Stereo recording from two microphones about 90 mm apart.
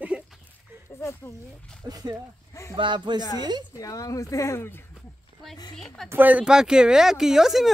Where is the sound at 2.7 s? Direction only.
60° right (ahead or behind).